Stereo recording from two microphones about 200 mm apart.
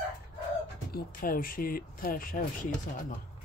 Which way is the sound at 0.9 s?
45° left (ahead or behind).